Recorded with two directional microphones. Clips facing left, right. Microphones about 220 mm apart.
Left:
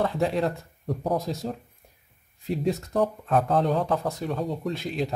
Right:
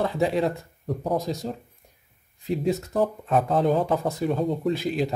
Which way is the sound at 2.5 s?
Centre (ahead or behind).